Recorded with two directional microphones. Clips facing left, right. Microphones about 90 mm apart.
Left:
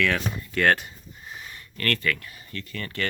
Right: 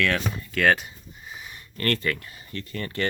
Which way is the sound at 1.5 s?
25° right (ahead or behind).